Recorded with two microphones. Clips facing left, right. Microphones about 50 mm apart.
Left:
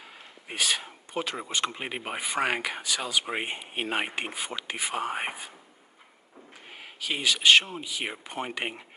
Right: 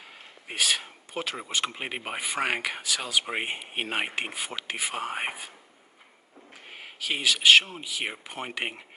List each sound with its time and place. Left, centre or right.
0.2 s speech: centre
6.5 s speech: centre